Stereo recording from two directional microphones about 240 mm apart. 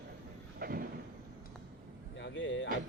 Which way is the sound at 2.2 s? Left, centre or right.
Left.